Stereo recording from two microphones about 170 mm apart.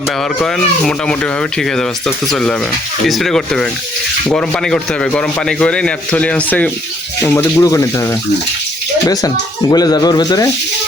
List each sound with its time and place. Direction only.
0.2 s speech: 5° left (ahead or behind); by 10.5 s 20° left (ahead or behind)